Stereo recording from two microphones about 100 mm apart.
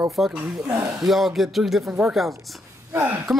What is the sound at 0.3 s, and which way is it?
Speech, 15° right (ahead or behind).